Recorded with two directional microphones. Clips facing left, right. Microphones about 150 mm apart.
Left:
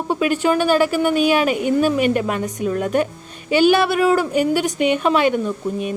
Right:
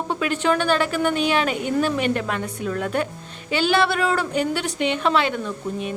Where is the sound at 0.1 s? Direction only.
10° left (ahead or behind).